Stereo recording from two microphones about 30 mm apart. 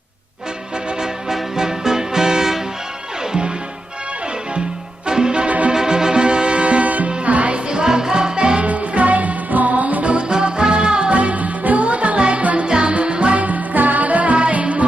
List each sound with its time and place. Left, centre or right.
1.3 s music: centre
5.0 s music: right
5.5 s music: right
5.7 s music: right
7.5 s music: right
8.6 s music: right
10.2 s music: right
11.2 s music: right
12.6 s music: right
12.9 s music: right
13.4 s music: right
14.3 s music: right